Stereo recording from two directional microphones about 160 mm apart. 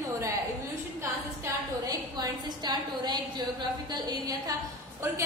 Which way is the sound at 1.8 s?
25° right (ahead or behind).